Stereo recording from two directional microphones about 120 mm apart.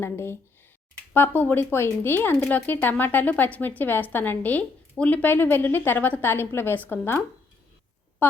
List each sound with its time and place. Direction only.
0.0 s speech: 20° left (ahead or behind)
8.2 s a woman's voice: 15° left (ahead or behind)